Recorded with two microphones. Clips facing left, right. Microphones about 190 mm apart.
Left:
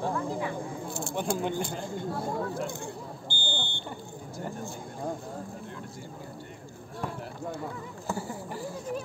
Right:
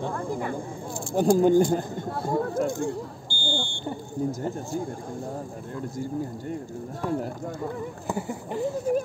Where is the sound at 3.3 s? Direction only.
20° left (ahead or behind).